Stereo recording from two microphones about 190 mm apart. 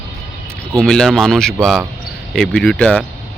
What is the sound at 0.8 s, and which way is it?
Speech, 5° left (ahead or behind).